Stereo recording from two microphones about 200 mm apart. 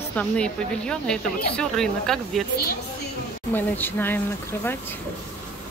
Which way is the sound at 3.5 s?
10° left (ahead or behind).